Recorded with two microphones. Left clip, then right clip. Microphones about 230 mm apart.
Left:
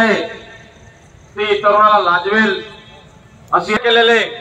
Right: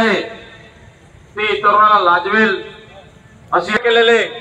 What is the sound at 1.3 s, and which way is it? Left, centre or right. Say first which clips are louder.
A man's voice: even; right.